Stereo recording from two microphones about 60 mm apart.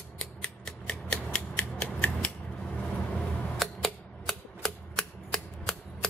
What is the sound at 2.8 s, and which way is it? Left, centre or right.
Vehicle, centre.